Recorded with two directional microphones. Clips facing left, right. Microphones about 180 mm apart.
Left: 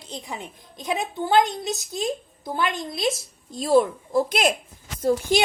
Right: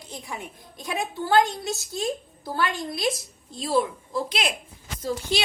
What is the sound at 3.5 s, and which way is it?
Speech, 45° left (ahead or behind).